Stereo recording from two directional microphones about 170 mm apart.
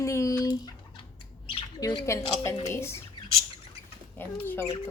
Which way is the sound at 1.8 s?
20° left (ahead or behind).